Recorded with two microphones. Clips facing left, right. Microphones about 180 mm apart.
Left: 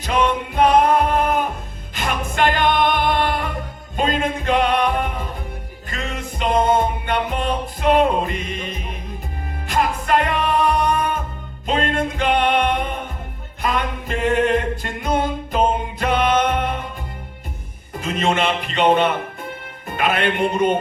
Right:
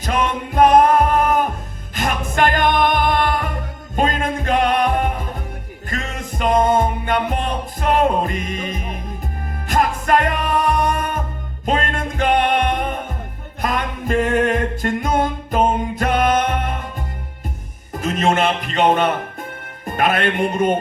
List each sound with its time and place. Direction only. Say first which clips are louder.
0.0 s music: left 1 dB; 45° right (ahead or behind)
2.0 s music: right 2 dB; 45° right (ahead or behind)
17.9 s music: right 2 dB; 45° right (ahead or behind)